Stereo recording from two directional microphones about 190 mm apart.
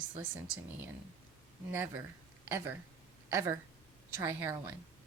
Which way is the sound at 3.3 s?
15° right (ahead or behind).